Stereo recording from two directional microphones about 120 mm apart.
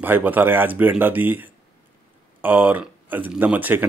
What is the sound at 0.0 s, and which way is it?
Speech, 15° right (ahead or behind).